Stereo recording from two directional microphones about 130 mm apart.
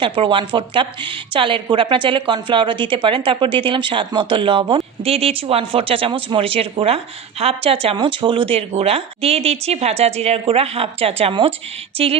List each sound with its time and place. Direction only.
0.0 s a woman's voice: 40° right (ahead or behind)